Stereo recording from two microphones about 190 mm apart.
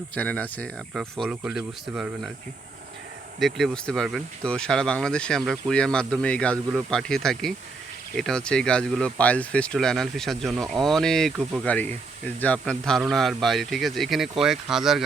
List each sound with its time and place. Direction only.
0.1 s speech: 10° left (ahead or behind)
3.4 s speech: centre (ahead or behind)